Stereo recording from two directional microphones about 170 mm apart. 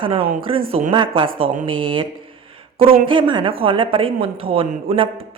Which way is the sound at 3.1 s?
30° right (ahead or behind).